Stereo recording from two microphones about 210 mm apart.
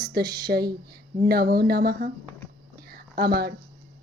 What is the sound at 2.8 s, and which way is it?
Whispering, 45° right (ahead or behind).